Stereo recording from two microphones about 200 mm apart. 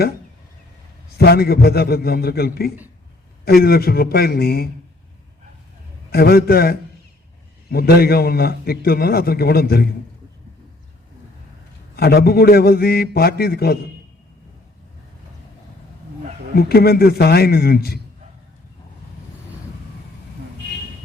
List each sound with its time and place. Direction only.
1.2 s a man's voice: 50° left (ahead or behind)
6.1 s a man's voice: 50° left (ahead or behind)
11.9 s a man's voice: 50° left (ahead or behind)
16.6 s a man's voice: 50° left (ahead or behind)